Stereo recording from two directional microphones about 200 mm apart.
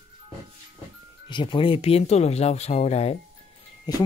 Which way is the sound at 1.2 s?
25° left (ahead or behind).